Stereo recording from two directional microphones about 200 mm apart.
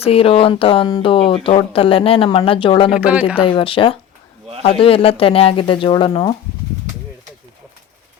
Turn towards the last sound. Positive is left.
turn(degrees=20)  # may be behind; listen again after turning